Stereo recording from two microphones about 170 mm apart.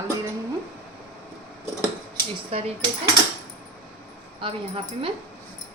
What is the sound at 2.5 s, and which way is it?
Speech, 35° right (ahead or behind).